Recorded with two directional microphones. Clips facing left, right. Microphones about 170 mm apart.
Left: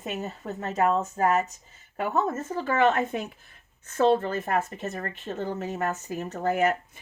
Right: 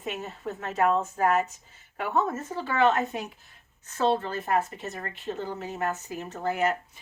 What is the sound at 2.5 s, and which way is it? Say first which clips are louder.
Speech: left 1 dB; 45° left (ahead or behind).